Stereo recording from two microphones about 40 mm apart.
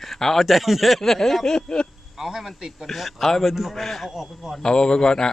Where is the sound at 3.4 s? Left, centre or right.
Centre.